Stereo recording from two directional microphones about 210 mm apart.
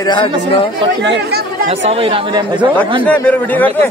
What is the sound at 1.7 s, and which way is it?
Speech, 30° right (ahead or behind).